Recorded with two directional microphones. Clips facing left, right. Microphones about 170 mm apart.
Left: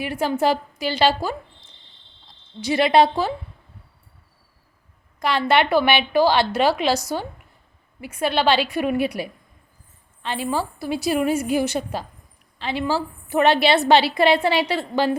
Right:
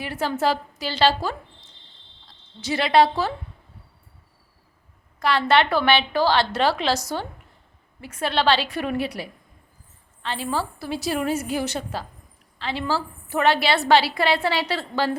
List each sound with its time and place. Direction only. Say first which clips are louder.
0.0 s a woman's voice: left 3 dB; 15° left (ahead or behind)
5.2 s a woman's voice: even; 15° left (ahead or behind)